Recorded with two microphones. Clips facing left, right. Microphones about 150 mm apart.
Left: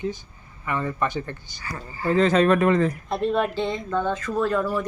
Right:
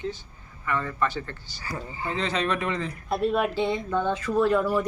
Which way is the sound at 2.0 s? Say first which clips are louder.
Left 10 dB; 45° left (ahead or behind).